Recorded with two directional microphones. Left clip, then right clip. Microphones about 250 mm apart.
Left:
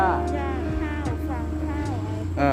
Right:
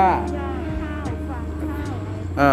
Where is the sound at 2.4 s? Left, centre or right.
Centre.